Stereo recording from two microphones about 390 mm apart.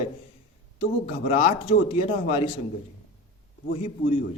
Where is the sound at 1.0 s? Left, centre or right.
Centre.